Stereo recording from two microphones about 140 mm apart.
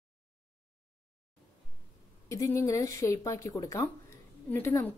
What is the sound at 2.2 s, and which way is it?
A woman's voice, 20° left (ahead or behind).